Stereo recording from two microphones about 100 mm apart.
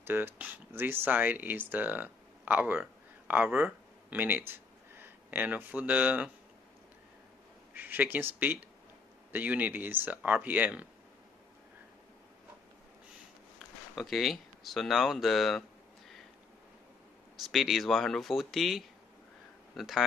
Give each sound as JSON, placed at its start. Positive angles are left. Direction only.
{"t": 0.0, "sound": "speech", "side_deg": -20}
{"t": 7.7, "sound": "speech", "side_deg": -20}
{"t": 13.6, "sound": "speech", "side_deg": 0}
{"t": 17.5, "sound": "speech", "side_deg": 0}